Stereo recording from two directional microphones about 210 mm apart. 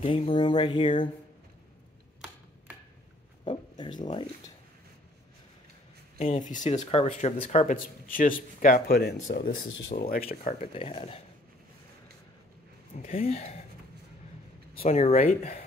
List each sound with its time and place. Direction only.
0.0 s speech: 25° left (ahead or behind)
3.4 s speech: 20° left (ahead or behind)
6.1 s speech: 35° left (ahead or behind)
9.6 s speech: 65° left (ahead or behind)
9.9 s speech: 45° left (ahead or behind)
10.7 s speech: 25° left (ahead or behind)
13.0 s speech: 30° left (ahead or behind)
14.8 s speech: 30° left (ahead or behind)